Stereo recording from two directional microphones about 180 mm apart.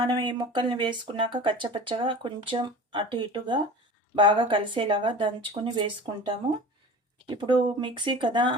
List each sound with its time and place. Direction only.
0.0 s speech: 25° right (ahead or behind)
7.3 s speech: 25° right (ahead or behind)